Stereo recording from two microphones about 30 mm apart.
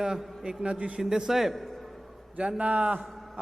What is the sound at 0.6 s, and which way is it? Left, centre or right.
Speech, right.